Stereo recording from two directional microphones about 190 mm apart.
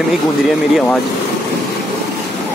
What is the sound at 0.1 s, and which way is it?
Speech, centre (ahead or behind).